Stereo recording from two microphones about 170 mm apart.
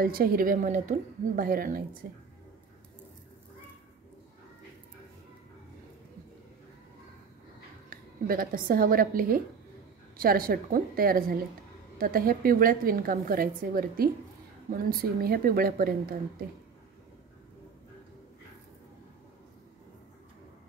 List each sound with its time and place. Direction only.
0.0 s a woman's voice: 60° right (ahead or behind)
7.9 s a woman's voice: 55° right (ahead or behind)